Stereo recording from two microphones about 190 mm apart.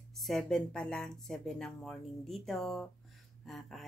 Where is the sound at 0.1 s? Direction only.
Centre (ahead or behind).